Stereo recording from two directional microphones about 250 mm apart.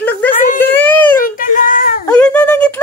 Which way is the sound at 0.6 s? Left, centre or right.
Centre.